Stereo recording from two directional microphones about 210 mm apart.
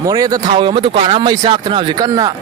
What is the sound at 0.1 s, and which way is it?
Speech, 20° right (ahead or behind).